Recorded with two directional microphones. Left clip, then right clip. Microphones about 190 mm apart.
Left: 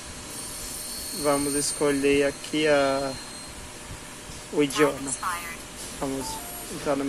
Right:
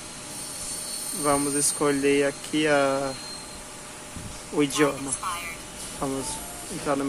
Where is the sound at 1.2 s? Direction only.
20° right (ahead or behind).